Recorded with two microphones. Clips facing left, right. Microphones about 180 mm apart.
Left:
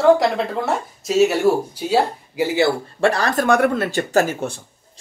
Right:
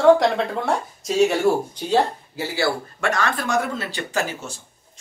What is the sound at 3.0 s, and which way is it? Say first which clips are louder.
Speech: left 6 dB; 35° left (ahead or behind).